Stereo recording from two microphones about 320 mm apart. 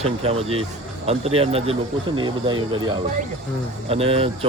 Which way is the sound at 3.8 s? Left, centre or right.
Centre.